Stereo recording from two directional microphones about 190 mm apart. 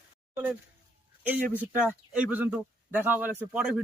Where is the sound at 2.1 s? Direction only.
10° right (ahead or behind).